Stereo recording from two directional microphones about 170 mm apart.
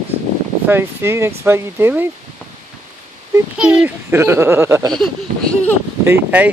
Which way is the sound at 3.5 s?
5° right (ahead or behind).